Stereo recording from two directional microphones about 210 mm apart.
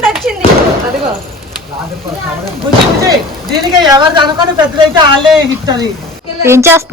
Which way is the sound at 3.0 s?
20° right (ahead or behind).